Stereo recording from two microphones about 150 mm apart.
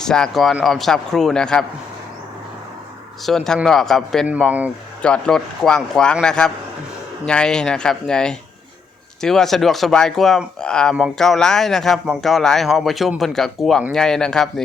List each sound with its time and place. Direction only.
0.0 s speech: 5° left (ahead or behind)
3.2 s speech: 5° left (ahead or behind)